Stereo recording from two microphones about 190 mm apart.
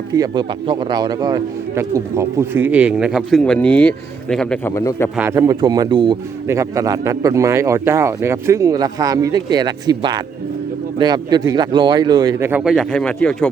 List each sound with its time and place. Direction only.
0.1 s a man's voice: 20° right (ahead or behind); by 4.7 s 5° left (ahead or behind)
4.7 s a man's voice: 15° left (ahead or behind)
5.1 s a man's voice: 15° right (ahead or behind); by 13.5 s 5° left (ahead or behind)